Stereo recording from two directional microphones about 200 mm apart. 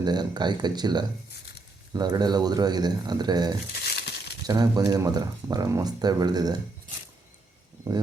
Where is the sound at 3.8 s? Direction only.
55° left (ahead or behind).